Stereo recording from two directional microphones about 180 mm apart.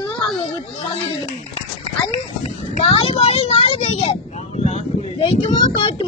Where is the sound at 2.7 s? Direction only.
35° left (ahead or behind).